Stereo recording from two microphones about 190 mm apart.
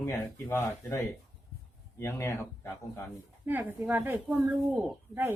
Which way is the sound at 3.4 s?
10° right (ahead or behind).